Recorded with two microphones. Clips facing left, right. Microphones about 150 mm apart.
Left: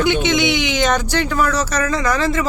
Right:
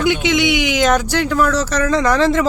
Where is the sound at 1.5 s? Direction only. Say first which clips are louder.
Right 3 dB; 10° left (ahead or behind).